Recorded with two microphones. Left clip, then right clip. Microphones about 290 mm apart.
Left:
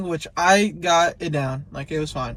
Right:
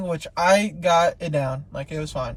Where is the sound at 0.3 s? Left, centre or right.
Centre.